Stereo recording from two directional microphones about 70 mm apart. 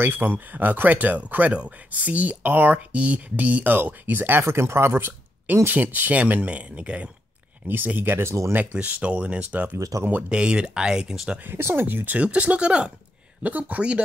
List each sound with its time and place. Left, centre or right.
0.0 s speech: right
8.5 s speech: centre
9.8 s speech: right
10.3 s speech: centre
11.3 s speech: right
12.2 s speech: centre